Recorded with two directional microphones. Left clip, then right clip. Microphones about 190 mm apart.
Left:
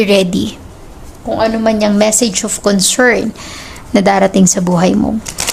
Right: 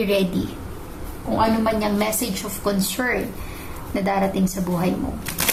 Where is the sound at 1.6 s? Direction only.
60° left (ahead or behind).